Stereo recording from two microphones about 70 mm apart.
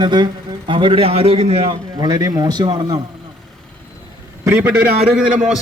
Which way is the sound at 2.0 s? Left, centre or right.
Right.